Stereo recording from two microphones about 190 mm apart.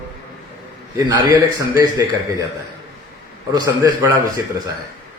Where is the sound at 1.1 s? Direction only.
20° right (ahead or behind).